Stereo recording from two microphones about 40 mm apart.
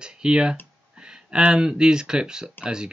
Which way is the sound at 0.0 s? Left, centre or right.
Right.